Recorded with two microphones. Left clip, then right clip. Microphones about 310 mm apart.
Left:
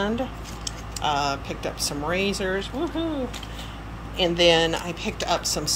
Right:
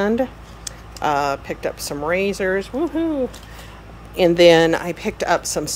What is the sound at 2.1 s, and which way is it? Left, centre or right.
Speech, centre.